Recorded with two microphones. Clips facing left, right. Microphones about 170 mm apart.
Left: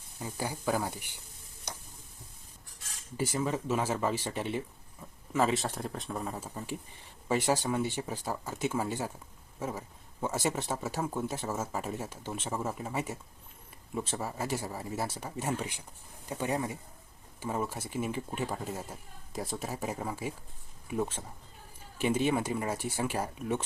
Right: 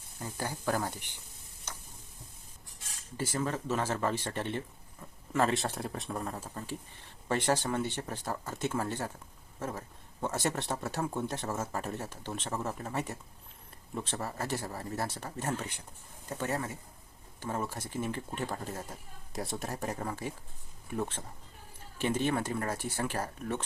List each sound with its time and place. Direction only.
0.2 s speech: 10° left (ahead or behind)
3.2 s speech: 10° left (ahead or behind)